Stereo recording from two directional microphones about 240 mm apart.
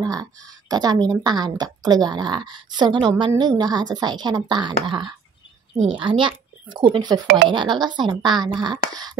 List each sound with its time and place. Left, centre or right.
0.0 s a woman's voice: centre